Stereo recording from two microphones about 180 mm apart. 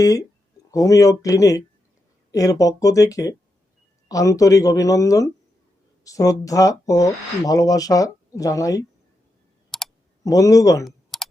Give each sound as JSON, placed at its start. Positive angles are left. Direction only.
{"t": 0.0, "sound": "speech", "side_deg": 20}
{"t": 9.7, "sound": "computer keyboard", "side_deg": 0}
{"t": 10.2, "sound": "speech", "side_deg": 20}
{"t": 10.8, "sound": "clicking", "side_deg": 0}